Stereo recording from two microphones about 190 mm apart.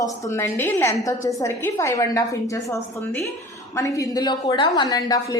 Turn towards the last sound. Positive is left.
turn(degrees=20)  # may be behind; listen again after turning